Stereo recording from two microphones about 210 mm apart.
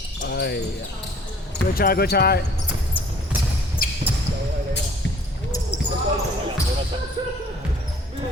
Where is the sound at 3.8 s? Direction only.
40° left (ahead or behind).